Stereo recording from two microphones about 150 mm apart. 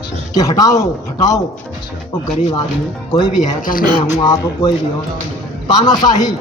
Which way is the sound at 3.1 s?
30° left (ahead or behind).